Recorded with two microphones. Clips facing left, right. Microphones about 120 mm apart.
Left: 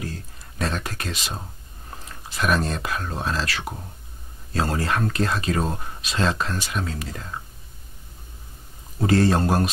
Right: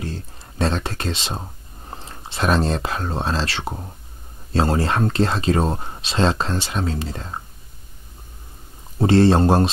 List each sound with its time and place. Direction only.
0.0 s a sound: 30° right (ahead or behind)
1.9 s speech: 30° right (ahead or behind)
9.0 s speech: 30° right (ahead or behind)